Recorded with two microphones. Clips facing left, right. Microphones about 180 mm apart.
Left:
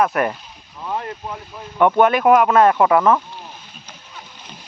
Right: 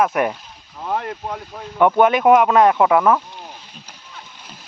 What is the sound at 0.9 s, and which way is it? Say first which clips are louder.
Speech: right 2 dB; 55° right (ahead or behind).